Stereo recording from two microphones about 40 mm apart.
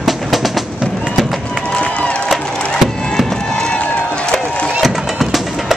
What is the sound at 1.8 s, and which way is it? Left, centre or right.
Run, left.